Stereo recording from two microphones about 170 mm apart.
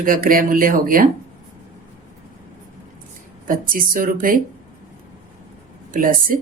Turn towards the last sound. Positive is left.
turn(degrees=-55)  # may be behind; listen again after turning